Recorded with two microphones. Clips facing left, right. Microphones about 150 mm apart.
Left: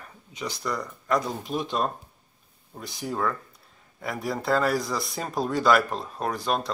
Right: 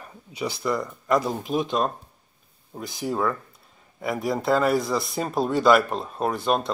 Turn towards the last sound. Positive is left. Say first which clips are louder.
# right 4 dB
turn(degrees=0)  # may be behind; listen again after turning